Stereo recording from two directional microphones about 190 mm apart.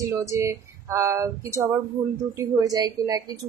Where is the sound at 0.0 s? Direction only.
15° right (ahead or behind).